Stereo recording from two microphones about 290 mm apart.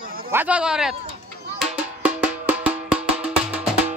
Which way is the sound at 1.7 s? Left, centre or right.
Centre.